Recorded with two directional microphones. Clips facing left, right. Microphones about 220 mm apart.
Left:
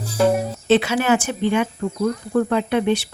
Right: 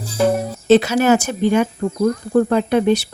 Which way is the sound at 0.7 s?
40° right (ahead or behind).